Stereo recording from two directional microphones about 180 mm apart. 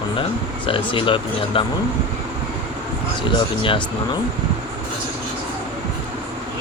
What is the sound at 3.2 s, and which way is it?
Speech, 30° left (ahead or behind).